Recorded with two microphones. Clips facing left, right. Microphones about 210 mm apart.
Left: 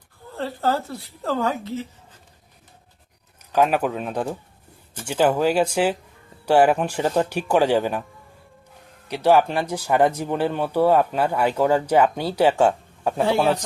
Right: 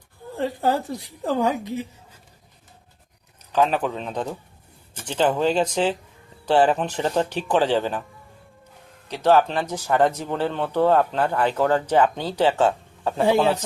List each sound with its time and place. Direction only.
0.3 s a woman's voice: 15° right (ahead or behind)
3.5 s speech: 10° left (ahead or behind)
9.0 s speech: 10° left (ahead or behind)